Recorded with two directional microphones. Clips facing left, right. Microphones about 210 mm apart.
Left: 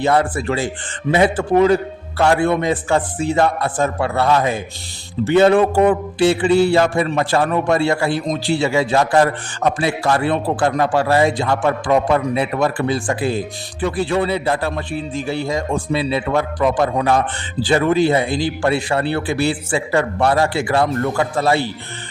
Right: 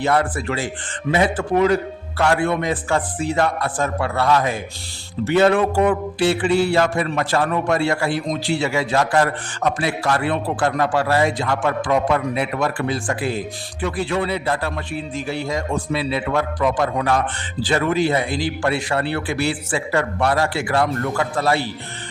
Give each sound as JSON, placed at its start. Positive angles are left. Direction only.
{"t": 0.0, "sound": "mantra", "side_deg": 25}